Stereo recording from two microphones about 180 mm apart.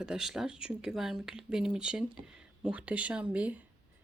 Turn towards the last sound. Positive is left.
turn(degrees=-10)  # may be behind; listen again after turning